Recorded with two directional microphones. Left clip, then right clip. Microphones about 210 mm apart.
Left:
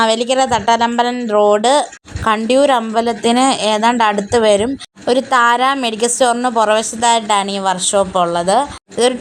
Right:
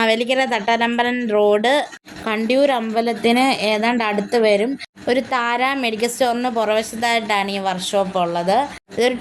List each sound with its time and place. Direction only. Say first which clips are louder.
0.0 s a woman's voice: left 4 dB; 10° left (ahead or behind)